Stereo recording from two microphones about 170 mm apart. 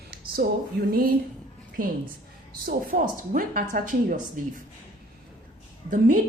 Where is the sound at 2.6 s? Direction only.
55° right (ahead or behind).